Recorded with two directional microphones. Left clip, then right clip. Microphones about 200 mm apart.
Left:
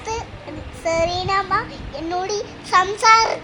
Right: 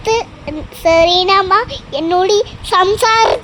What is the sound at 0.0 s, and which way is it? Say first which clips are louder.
Child singing: right 12 dB; 35° right (ahead or behind).